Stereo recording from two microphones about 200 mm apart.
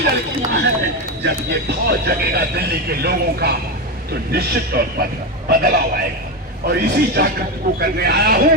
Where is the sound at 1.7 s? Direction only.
55° right (ahead or behind).